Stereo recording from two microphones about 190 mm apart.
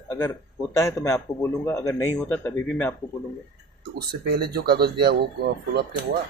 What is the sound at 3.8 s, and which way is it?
Speech, 55° right (ahead or behind).